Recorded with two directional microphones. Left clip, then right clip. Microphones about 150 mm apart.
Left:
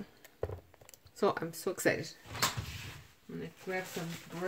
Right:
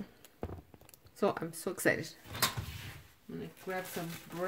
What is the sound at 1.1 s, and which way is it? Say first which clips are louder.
Speech: left 1 dB; 15° right (ahead or behind).